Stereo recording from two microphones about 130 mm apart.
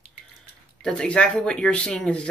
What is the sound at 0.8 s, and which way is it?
Speech, 5° left (ahead or behind).